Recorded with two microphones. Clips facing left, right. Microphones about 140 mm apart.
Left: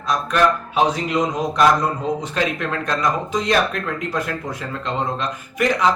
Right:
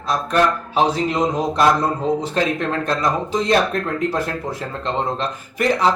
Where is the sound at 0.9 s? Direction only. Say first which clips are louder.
Right 2 dB; 30° right (ahead or behind).